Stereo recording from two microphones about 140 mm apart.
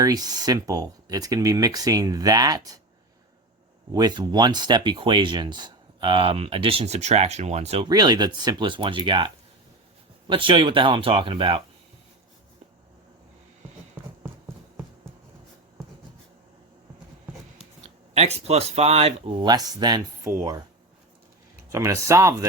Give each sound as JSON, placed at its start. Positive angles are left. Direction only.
{"t": 0.0, "sound": "speech", "side_deg": -30}
{"t": 3.9, "sound": "speech", "side_deg": -30}
{"t": 7.9, "sound": "speech", "side_deg": -30}
{"t": 17.8, "sound": "speech", "side_deg": -50}
{"t": 19.5, "sound": "speech", "side_deg": -30}
{"t": 21.7, "sound": "speech", "side_deg": -20}